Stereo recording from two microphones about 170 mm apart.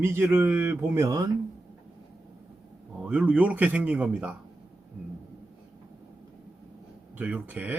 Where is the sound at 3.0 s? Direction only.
5° right (ahead or behind).